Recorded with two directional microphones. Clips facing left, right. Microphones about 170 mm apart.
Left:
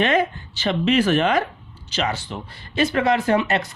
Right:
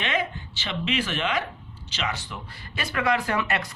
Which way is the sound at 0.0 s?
45° left (ahead or behind).